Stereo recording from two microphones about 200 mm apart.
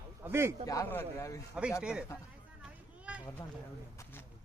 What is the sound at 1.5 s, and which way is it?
Speech, 5° right (ahead or behind).